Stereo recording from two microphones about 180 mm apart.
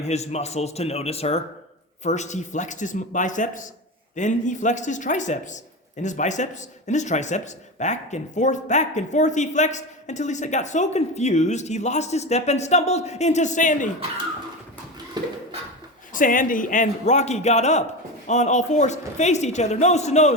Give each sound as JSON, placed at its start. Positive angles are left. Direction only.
{"t": 0.0, "sound": "a man's voice", "side_deg": 35}
{"t": 15.2, "sound": "a sound", "side_deg": -25}
{"t": 16.1, "sound": "a man's voice", "side_deg": 50}